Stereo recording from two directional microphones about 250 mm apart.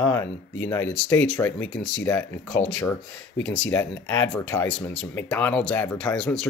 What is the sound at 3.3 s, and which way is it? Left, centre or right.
Speech, left.